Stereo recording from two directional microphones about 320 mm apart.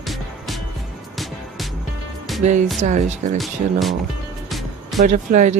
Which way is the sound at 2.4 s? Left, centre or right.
Right.